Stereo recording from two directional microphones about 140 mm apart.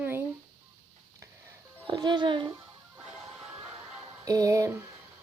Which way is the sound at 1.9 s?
30° right (ahead or behind).